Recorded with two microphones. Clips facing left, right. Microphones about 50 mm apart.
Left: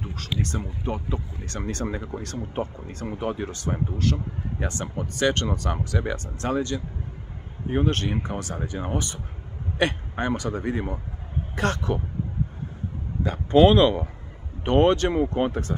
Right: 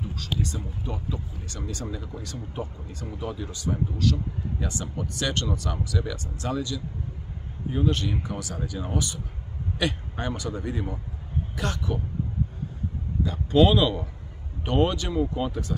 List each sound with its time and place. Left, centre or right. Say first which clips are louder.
0.1 s speech: left 3 dB; left
11.5 s speech: left 6 dB; left
13.2 s speech: left 3 dB; left
14.7 s speech: left 5 dB; left